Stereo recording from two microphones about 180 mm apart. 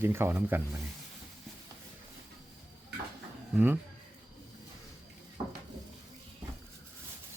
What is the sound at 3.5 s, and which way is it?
Speech, 10° right (ahead or behind).